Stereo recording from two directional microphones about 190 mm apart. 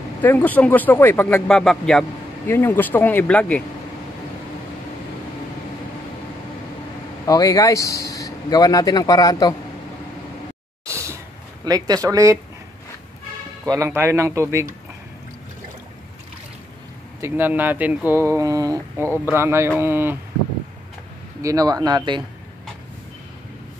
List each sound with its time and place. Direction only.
0.2 s speech: 10° left (ahead or behind)
7.2 s speech: 20° left (ahead or behind)
10.9 s a sound: 15° right (ahead or behind)
11.6 s speech: 20° right (ahead or behind)
13.7 s speech: 15° right (ahead or behind)
17.2 s speech: 10° right (ahead or behind)
21.4 s speech: 20° right (ahead or behind)